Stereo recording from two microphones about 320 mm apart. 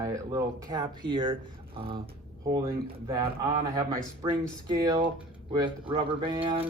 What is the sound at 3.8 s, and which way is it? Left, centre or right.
A man's voice, centre.